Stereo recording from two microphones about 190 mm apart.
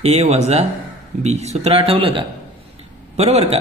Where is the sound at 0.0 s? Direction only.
35° right (ahead or behind).